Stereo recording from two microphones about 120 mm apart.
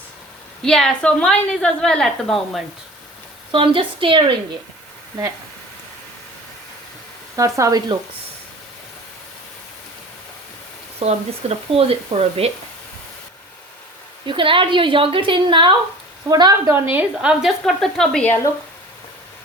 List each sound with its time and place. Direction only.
0.6 s a woman's voice: 5° left (ahead or behind)
3.5 s a woman's voice: 45° right (ahead or behind)
7.3 s speech: 25° right (ahead or behind)
11.0 s speech: 55° right (ahead or behind)
14.3 s a woman's voice: 45° right (ahead or behind)
16.3 s a woman's voice: 30° right (ahead or behind)
16.9 s a woman's voice: 10° right (ahead or behind); by 18.3 s 5° left (ahead or behind)